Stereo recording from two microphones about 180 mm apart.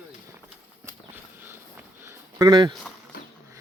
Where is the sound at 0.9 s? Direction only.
10° right (ahead or behind).